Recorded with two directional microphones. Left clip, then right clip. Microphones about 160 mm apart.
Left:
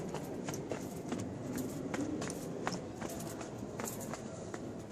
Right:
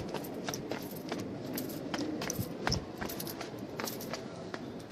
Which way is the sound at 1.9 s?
70° right (ahead or behind).